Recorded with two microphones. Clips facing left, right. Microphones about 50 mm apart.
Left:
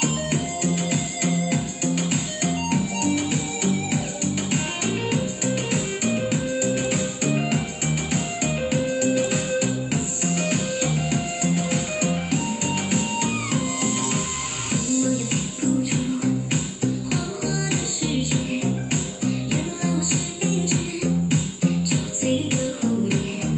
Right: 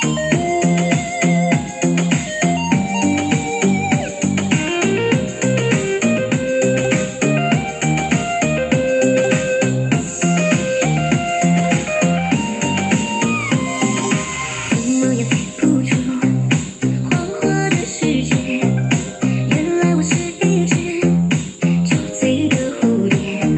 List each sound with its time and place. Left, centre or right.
0.0 s music: right